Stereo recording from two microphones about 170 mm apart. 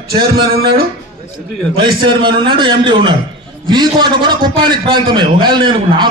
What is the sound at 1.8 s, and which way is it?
A man's voice, 30° right (ahead or behind).